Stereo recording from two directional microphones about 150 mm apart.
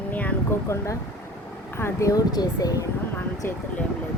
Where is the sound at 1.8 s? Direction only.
20° left (ahead or behind).